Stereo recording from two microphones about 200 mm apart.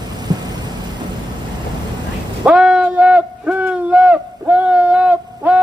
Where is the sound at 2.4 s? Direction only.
5° right (ahead or behind).